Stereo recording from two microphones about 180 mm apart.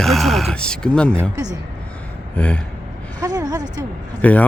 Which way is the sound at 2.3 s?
5° left (ahead or behind).